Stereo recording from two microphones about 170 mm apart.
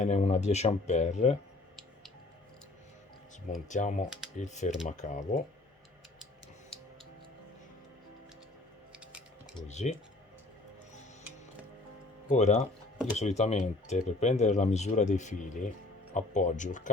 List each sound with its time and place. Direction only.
0.0 s speech: 45° left (ahead or behind)
3.7 s speech: 45° left (ahead or behind)
8.9 s a sound: 5° right (ahead or behind)
9.6 s speech: 40° left (ahead or behind)
12.3 s speech: 45° left (ahead or behind)